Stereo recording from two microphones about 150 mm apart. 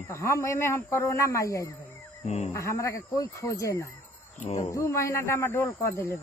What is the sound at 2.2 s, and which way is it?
Speech, 50° left (ahead or behind).